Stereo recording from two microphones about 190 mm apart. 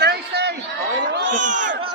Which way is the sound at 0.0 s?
60° right (ahead or behind).